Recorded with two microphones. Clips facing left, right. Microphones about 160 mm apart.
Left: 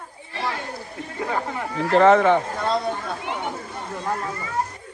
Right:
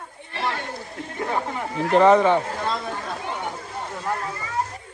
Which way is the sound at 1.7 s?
15° right (ahead or behind).